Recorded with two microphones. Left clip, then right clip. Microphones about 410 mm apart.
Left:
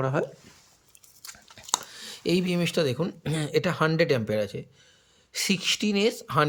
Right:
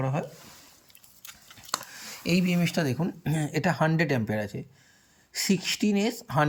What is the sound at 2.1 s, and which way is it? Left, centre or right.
Speech, centre.